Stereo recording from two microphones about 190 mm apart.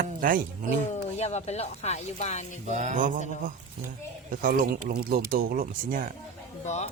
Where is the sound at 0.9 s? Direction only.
35° left (ahead or behind).